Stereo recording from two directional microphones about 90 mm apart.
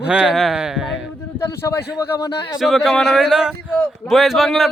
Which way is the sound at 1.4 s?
30° left (ahead or behind).